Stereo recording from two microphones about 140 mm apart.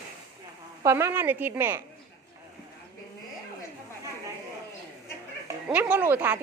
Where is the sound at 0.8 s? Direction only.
20° right (ahead or behind).